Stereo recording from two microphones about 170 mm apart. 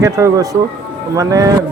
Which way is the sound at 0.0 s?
20° right (ahead or behind).